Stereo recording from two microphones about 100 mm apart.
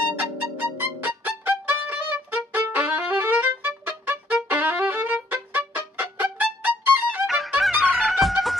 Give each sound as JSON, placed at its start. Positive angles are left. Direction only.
{"t": 0.1, "sound": "violin", "side_deg": -20}
{"t": 7.2, "sound": "music", "side_deg": 0}